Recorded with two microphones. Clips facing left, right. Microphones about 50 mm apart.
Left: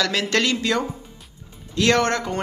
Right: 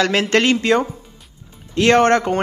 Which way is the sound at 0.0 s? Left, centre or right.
Right.